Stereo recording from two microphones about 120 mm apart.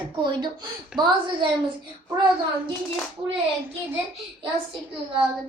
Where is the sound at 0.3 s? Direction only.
35° right (ahead or behind).